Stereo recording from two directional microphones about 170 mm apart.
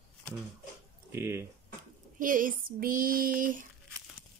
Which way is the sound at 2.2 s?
55° right (ahead or behind).